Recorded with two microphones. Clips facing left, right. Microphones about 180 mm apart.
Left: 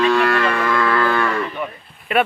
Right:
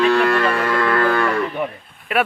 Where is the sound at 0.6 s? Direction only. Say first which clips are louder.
Even; 5° right (ahead or behind).